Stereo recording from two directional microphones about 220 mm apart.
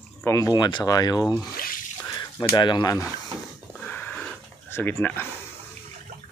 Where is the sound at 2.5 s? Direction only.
20° left (ahead or behind).